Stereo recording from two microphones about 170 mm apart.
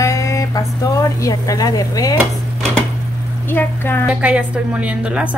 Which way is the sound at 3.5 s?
15° left (ahead or behind).